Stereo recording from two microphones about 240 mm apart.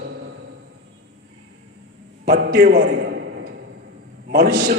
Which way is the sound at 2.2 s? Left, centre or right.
Right.